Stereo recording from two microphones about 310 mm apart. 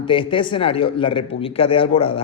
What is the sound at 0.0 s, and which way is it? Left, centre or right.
A man's voice, centre.